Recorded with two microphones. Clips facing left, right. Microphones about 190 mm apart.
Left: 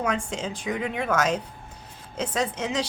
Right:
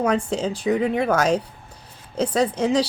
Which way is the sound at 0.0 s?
35° right (ahead or behind).